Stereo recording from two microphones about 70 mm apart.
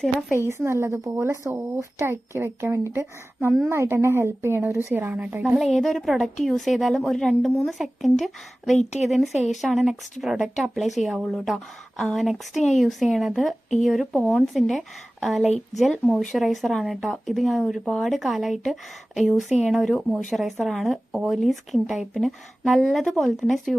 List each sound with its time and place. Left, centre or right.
0.3 s a woman's voice: right
4.9 s a woman's voice: right
5.5 s a woman's voice: centre